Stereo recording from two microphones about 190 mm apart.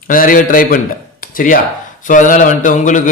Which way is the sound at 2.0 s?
45° left (ahead or behind).